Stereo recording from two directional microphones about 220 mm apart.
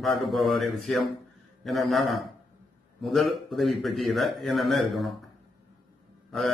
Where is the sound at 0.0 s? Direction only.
Centre (ahead or behind).